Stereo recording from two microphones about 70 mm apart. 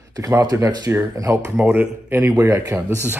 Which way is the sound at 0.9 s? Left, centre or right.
Right.